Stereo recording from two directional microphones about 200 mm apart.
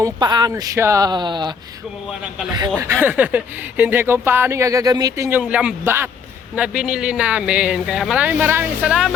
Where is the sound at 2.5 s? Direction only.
20° right (ahead or behind).